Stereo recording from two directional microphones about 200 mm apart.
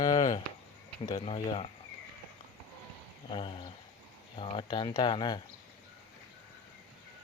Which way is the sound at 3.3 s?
25° left (ahead or behind).